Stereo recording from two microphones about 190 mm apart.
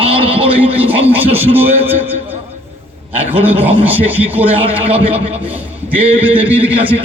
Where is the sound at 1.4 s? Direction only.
10° right (ahead or behind).